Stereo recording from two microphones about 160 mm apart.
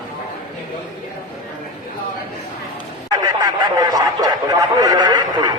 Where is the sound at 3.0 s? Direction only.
25° right (ahead or behind).